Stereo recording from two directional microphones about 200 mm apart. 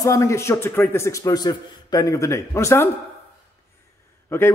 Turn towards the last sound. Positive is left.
turn(degrees=15)  # may be behind; listen again after turning